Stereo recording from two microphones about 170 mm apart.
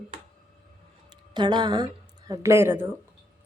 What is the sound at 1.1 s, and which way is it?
Speech, 25° right (ahead or behind).